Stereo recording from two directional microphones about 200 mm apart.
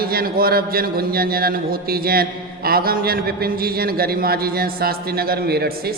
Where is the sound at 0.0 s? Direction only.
50° right (ahead or behind).